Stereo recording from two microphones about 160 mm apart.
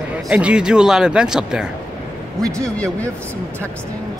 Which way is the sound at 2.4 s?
20° right (ahead or behind).